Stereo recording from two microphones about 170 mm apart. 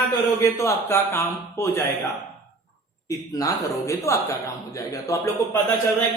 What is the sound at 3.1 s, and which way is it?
Speech, 20° left (ahead or behind).